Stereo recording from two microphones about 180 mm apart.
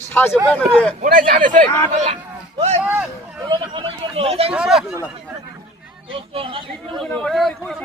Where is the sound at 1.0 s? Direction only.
50° right (ahead or behind).